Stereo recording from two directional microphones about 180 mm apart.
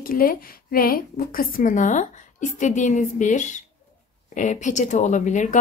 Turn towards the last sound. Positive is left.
turn(degrees=45)  # may be behind; listen again after turning